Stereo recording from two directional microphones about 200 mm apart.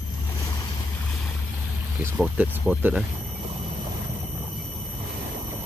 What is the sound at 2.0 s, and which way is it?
Speech, 10° right (ahead or behind).